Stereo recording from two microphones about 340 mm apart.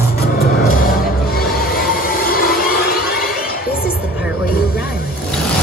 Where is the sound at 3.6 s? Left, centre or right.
Left.